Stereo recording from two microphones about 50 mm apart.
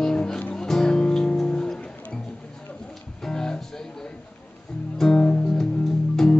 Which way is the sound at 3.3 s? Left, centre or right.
Centre.